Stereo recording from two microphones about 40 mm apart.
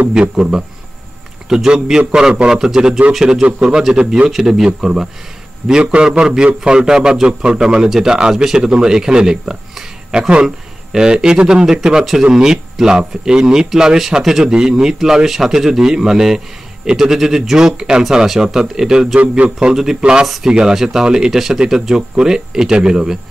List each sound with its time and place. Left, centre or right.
0.1 s a man's voice: centre
1.5 s a man's voice: centre
3.9 s a man's voice: right
4.3 s a man's voice: centre
19.1 s a man's voice: right
19.7 s a man's voice: centre